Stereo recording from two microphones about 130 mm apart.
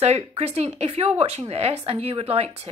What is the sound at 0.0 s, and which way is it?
Speech, 50° right (ahead or behind).